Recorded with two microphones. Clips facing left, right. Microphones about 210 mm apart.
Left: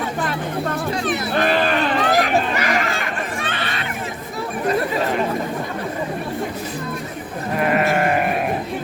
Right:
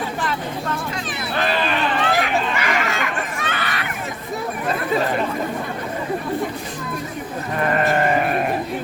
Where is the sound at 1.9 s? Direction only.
40° left (ahead or behind).